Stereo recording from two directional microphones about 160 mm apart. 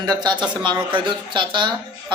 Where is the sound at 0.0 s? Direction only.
25° right (ahead or behind).